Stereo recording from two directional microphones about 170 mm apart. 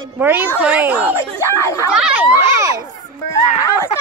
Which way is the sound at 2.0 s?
5° right (ahead or behind).